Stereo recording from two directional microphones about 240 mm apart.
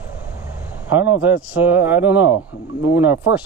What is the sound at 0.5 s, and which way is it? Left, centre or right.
A man's voice, centre.